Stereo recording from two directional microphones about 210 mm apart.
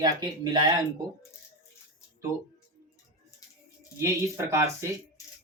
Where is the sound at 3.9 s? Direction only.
10° right (ahead or behind).